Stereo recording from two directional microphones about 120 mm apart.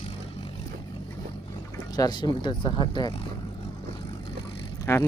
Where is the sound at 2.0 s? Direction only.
35° left (ahead or behind).